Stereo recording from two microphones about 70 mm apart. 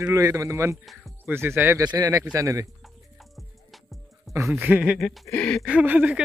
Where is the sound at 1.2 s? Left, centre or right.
Right.